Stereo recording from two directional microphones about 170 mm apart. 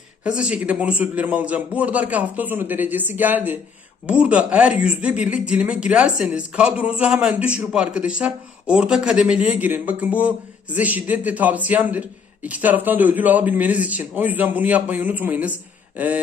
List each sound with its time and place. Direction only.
0.3 s speech: 5° right (ahead or behind)